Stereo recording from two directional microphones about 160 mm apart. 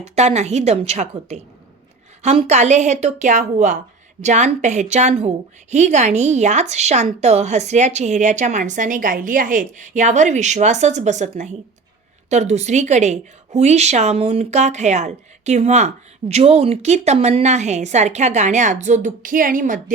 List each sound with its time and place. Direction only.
0.2 s a woman's voice: 45° right (ahead or behind)